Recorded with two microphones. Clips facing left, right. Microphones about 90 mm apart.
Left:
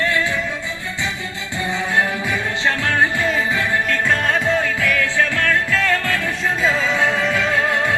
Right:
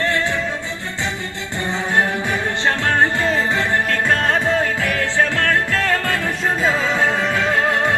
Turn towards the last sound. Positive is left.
turn(degrees=-35)  # may be behind; listen again after turning